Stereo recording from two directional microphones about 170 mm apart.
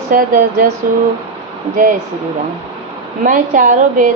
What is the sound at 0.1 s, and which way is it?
Speech, 55° right (ahead or behind).